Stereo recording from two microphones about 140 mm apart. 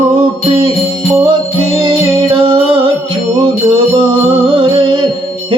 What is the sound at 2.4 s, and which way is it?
Music, 40° right (ahead or behind).